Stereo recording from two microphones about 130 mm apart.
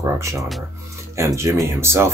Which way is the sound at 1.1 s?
20° right (ahead or behind).